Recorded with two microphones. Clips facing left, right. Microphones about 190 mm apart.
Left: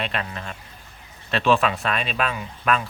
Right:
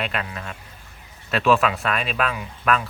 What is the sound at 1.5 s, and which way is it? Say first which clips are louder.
Speech: right 1 dB; 30° left (ahead or behind).